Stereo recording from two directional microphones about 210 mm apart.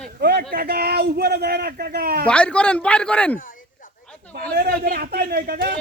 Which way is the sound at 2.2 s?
5° left (ahead or behind).